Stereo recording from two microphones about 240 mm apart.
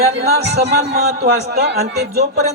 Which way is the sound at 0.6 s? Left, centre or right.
Right.